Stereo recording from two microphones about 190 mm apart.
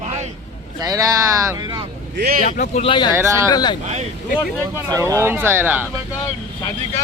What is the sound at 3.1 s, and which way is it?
Speech, 15° right (ahead or behind).